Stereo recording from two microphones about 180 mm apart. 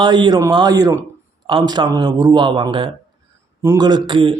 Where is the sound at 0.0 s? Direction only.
25° right (ahead or behind).